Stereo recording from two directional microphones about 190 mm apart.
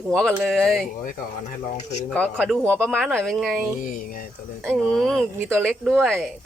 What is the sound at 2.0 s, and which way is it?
Speech, 5° left (ahead or behind).